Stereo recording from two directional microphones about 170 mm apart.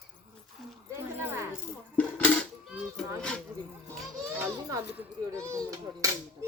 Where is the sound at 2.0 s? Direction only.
10° left (ahead or behind).